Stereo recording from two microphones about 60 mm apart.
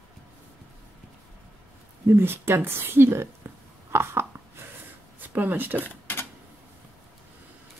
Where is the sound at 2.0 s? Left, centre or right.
Right.